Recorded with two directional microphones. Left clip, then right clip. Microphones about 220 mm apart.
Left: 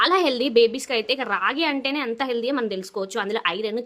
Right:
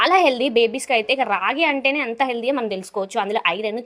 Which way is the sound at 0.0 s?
5° right (ahead or behind).